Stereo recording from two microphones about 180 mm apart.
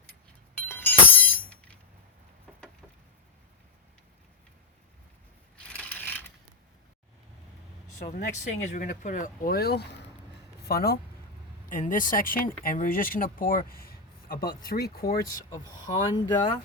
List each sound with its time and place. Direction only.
0.6 s chink: 10° left (ahead or behind)
5.6 s mechanisms: 5° left (ahead or behind)
8.0 s speech: 45° left (ahead or behind); by 10.9 s 60° left (ahead or behind)
11.7 s speech: 50° left (ahead or behind)
15.4 s speech: 15° left (ahead or behind)